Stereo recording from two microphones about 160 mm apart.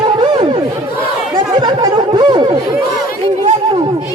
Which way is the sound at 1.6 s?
25° right (ahead or behind).